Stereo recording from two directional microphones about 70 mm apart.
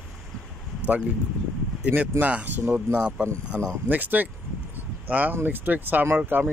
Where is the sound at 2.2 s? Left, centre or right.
Right.